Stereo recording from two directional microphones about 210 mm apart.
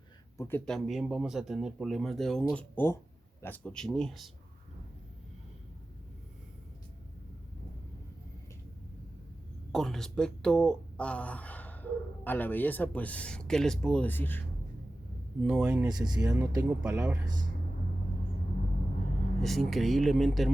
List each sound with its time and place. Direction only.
0.3 s speech: 10° left (ahead or behind)
9.7 s speech: centre (ahead or behind)
15.4 s speech: 5° right (ahead or behind)
15.9 s speech: 20° right (ahead or behind)
19.4 s speech: centre (ahead or behind)